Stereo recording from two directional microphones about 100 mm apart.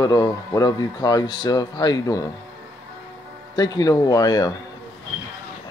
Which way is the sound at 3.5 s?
40° left (ahead or behind).